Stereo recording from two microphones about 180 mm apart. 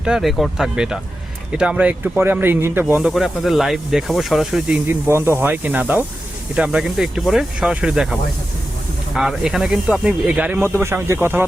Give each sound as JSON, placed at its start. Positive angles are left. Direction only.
{"t": 0.0, "sound": "speech", "side_deg": -5}
{"t": 2.9, "sound": "speech", "side_deg": 0}
{"t": 5.0, "sound": "speech", "side_deg": -15}
{"t": 9.1, "sound": "speech", "side_deg": -5}